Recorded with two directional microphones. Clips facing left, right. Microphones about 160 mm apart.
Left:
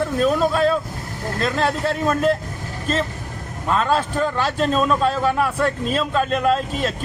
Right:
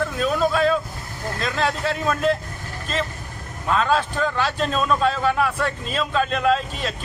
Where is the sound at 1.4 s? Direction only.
40° left (ahead or behind).